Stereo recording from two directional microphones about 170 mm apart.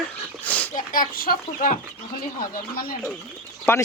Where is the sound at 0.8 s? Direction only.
55° left (ahead or behind).